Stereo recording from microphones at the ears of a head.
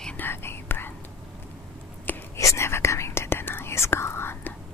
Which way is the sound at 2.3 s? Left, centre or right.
Left.